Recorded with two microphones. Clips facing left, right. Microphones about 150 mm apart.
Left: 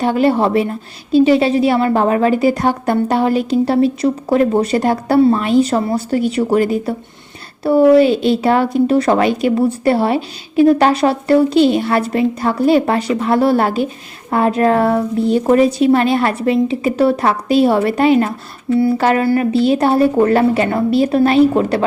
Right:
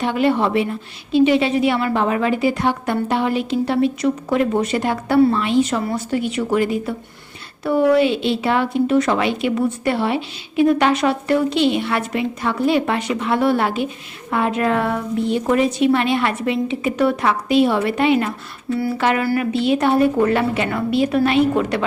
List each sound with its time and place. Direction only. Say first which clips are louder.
0.0 s speech: left 4 dB; 40° left (ahead or behind)
19.2 s a woman's voice: left 5 dB; 25° left (ahead or behind)
19.5 s speech: left 2 dB; 35° left (ahead or behind)